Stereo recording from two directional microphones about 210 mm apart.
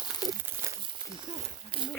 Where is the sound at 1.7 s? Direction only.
25° right (ahead or behind).